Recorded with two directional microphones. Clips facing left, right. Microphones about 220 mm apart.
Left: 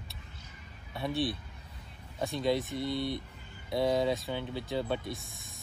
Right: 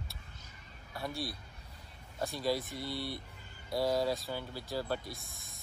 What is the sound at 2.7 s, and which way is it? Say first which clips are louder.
Speech: left 6 dB; 20° left (ahead or behind).